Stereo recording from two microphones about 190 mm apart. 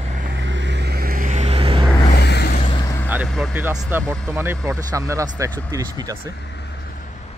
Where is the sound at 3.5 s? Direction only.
10° right (ahead or behind).